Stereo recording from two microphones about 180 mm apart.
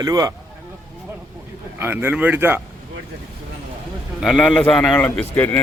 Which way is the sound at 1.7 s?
10° right (ahead or behind).